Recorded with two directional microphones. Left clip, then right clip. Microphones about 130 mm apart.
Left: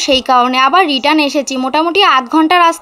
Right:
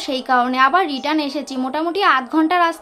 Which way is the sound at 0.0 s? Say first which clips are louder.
Left 8 dB; 30° left (ahead or behind).